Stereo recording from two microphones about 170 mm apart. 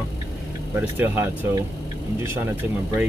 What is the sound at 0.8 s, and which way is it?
Speech, 15° right (ahead or behind).